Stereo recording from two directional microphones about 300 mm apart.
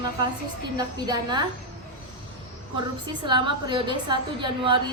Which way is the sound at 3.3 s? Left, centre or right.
Centre.